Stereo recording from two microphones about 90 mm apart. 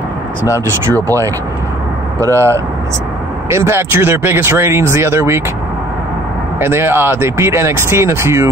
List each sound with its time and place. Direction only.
1.0 s speech: 35° right (ahead or behind)
6.6 s speech: 25° right (ahead or behind)